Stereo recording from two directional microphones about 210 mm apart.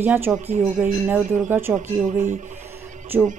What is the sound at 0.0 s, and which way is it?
Speech, 10° right (ahead or behind).